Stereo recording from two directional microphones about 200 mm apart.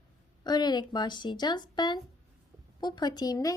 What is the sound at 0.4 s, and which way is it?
A woman's voice, 20° left (ahead or behind).